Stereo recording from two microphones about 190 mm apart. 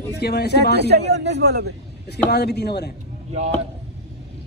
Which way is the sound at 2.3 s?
60° left (ahead or behind).